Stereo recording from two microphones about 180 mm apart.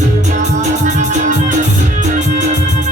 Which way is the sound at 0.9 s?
45° right (ahead or behind).